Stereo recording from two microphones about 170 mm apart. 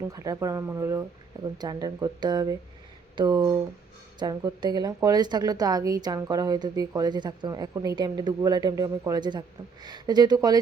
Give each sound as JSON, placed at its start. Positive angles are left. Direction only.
{"t": 0.1, "sound": "a woman's voice", "side_deg": -20}